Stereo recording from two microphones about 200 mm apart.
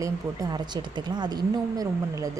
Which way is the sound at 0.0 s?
20° right (ahead or behind).